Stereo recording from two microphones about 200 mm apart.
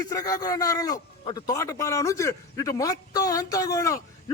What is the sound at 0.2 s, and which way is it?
A man's voice, 20° left (ahead or behind).